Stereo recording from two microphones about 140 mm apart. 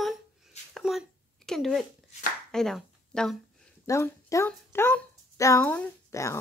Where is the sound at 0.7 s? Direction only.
Centre (ahead or behind).